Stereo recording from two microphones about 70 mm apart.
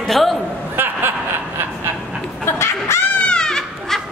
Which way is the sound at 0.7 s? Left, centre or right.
Right.